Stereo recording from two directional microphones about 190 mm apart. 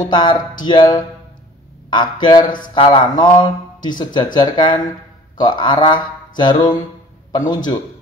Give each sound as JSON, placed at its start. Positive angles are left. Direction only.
{"t": 0.1, "sound": "speech", "side_deg": 25}